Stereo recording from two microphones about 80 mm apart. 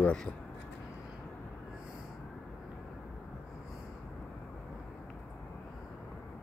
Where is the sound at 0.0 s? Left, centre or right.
Centre.